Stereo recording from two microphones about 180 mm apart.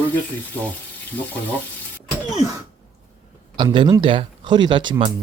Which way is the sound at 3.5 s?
25° right (ahead or behind).